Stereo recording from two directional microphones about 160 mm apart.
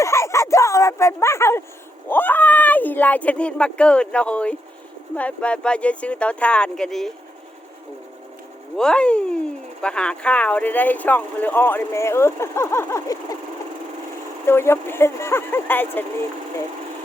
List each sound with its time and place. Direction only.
0.0 s a sound: 20° left (ahead or behind)
2.0 s speech: 10° left (ahead or behind)
8.7 s speech: 5° left (ahead or behind)
14.4 s speech: 15° left (ahead or behind)